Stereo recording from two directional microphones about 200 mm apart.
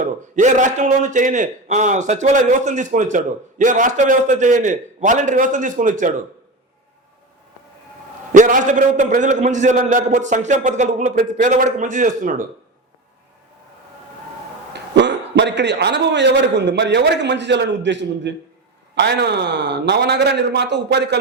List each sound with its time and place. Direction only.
0.0 s a man's voice: 40° right (ahead or behind)
8.3 s a man's voice: 40° right (ahead or behind)
14.7 s a man's voice: 60° right (ahead or behind)